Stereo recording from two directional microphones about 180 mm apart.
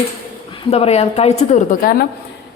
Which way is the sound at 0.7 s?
35° left (ahead or behind).